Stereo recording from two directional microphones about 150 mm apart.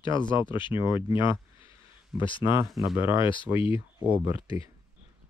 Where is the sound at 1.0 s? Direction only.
35° left (ahead or behind).